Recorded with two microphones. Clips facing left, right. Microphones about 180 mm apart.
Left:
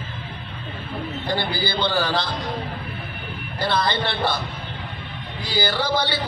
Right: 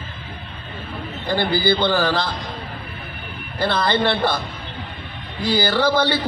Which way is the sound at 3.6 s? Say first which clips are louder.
Right 3 dB; 50° right (ahead or behind).